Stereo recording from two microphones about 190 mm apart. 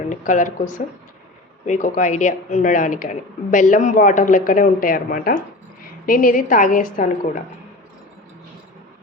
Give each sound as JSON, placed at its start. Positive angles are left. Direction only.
{"t": 0.1, "sound": "a woman's voice", "side_deg": 40}